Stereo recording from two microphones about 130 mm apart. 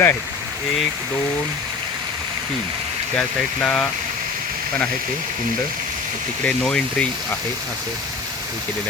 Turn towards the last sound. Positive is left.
turn(degrees=5)  # may be behind; listen again after turning